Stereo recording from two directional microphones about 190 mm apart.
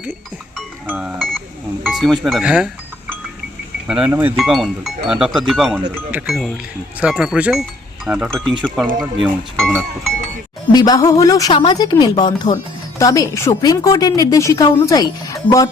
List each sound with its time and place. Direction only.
0.0 s speech: 5° right (ahead or behind)
3.8 s speech: 5° right (ahead or behind)
5.9 s speech: 10° right (ahead or behind)
6.2 s speech: centre (ahead or behind)
10.7 s a woman's voice: 20° left (ahead or behind)